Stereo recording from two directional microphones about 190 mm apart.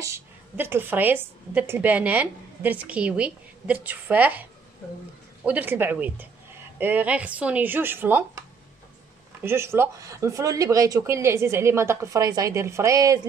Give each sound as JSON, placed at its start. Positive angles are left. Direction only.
{"t": 0.0, "sound": "a woman's voice", "side_deg": -15}